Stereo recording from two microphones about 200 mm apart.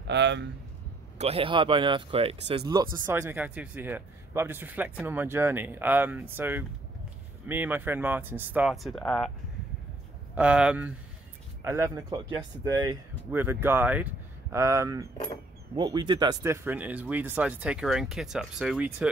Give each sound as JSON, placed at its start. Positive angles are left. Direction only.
{"t": 0.0, "sound": "speech", "side_deg": -60}
{"t": 1.1, "sound": "speech", "side_deg": -30}
{"t": 3.1, "sound": "speech", "side_deg": -10}
{"t": 10.3, "sound": "speech", "side_deg": -5}